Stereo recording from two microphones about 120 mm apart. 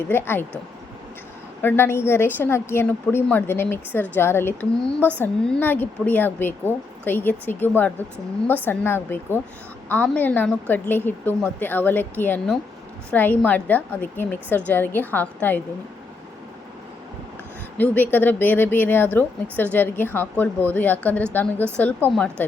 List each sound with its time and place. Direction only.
0.1 s speech: 20° left (ahead or behind)
1.6 s a woman's voice: 20° left (ahead or behind)
17.7 s speech: 15° left (ahead or behind)